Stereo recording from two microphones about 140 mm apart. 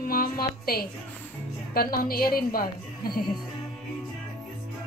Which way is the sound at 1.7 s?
90° left.